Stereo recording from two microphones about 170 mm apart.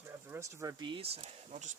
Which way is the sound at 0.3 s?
15° right (ahead or behind).